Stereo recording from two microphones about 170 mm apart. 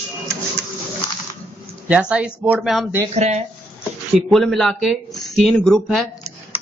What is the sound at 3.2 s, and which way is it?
Speech, 40° right (ahead or behind).